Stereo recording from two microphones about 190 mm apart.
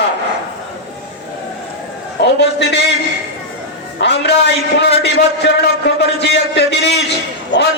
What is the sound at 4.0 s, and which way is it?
A man's voice, 65° left (ahead or behind).